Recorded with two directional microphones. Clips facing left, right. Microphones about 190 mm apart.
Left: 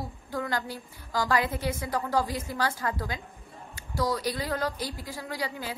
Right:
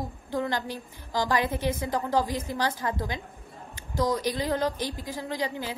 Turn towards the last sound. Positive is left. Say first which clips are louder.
# right 3 dB
turn(degrees=-20)  # may be behind; listen again after turning